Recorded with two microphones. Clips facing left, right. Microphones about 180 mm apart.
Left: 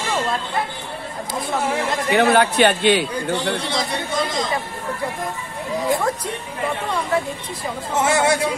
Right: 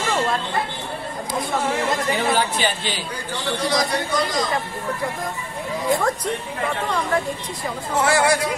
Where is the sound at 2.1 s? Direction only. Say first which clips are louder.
Left 10 dB; 65° left (ahead or behind).